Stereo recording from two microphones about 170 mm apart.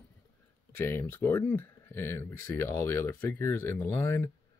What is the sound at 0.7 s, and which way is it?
Speech, 10° left (ahead or behind).